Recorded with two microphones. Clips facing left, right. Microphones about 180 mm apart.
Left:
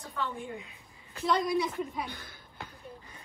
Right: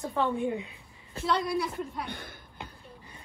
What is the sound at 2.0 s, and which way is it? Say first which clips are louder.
Speech: right 3 dB; 60° right (ahead or behind).